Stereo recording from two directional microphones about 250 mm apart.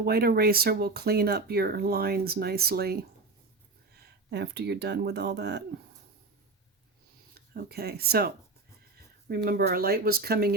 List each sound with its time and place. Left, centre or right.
0.0 s speech: right
4.3 s speech: right
7.3 s speech: right
9.3 s speech: right